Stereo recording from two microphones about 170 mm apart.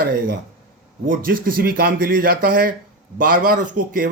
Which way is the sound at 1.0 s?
55° right (ahead or behind).